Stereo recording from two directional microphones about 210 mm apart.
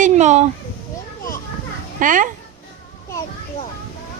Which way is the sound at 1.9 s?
40° right (ahead or behind).